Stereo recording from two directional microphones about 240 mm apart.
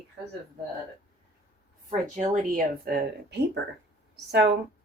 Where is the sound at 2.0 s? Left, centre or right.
Right.